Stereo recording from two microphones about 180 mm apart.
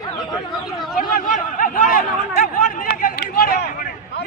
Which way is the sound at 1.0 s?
50° left (ahead or behind).